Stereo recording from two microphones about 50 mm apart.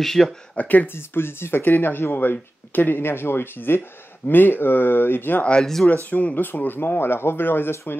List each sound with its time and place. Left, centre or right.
0.0 s speech: centre
0.6 s speech: left
0.9 s speech: left
3.0 s speech: left
5.6 s speech: centre
6.0 s speech: left